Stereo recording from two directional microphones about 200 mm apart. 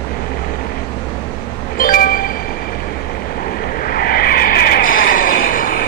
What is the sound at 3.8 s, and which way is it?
Vehicle, 50° left (ahead or behind).